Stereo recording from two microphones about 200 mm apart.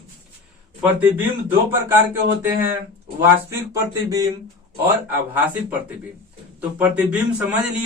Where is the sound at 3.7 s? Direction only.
15° right (ahead or behind).